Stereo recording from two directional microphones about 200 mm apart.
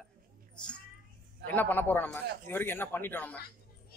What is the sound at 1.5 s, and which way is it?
Speech, 10° left (ahead or behind).